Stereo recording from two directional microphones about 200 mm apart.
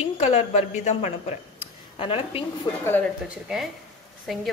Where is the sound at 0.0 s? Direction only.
30° left (ahead or behind).